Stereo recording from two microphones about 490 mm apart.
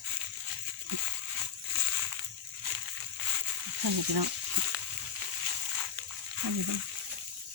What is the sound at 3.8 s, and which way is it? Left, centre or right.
Speech, right.